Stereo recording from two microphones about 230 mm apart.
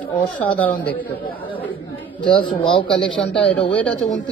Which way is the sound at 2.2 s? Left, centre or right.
Left.